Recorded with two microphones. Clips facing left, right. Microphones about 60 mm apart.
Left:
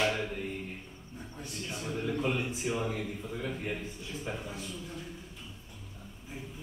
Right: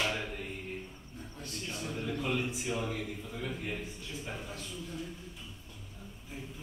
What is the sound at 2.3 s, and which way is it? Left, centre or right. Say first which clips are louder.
A man's voice: left 1 dB; centre.